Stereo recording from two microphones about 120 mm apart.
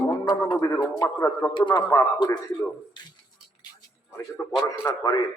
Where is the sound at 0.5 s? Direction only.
30° left (ahead or behind).